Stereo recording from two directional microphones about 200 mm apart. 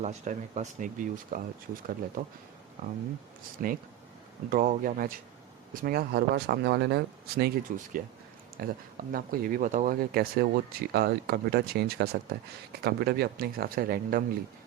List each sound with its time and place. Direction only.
0.0 s speech: 35° right (ahead or behind)
3.6 s speech: 40° right (ahead or behind)